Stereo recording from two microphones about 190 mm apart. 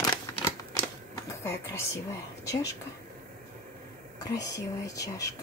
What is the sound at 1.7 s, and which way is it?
Speech, 15° left (ahead or behind).